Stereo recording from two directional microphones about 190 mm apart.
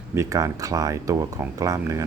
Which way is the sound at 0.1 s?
15° right (ahead or behind).